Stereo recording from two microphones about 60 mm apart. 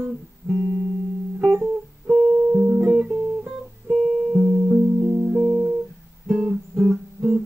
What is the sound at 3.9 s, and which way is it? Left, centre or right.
Music, centre.